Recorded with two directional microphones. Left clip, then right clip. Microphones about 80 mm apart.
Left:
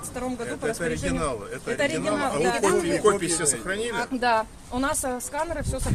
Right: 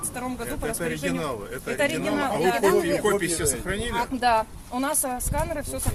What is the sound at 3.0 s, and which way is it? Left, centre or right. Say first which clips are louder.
Speech: left 2 dB; left.